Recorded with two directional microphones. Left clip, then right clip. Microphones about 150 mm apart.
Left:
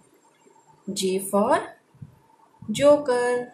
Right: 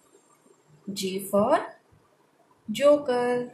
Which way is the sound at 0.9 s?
20° left (ahead or behind).